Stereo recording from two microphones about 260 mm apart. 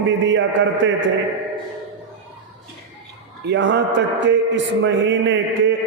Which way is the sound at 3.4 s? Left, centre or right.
Right.